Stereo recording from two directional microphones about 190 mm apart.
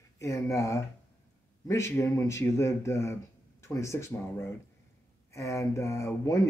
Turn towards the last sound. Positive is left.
turn(degrees=15)  # may be behind; listen again after turning